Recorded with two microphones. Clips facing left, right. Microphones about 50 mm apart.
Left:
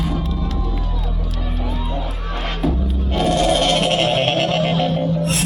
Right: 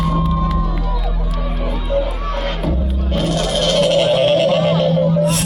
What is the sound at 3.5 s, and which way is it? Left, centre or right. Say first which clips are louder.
Music: right 1 dB; left.